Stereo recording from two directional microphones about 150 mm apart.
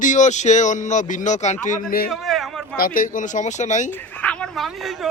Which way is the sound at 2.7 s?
70° left (ahead or behind).